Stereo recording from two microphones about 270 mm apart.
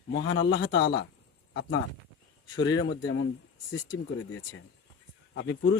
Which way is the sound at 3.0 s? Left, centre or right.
Left.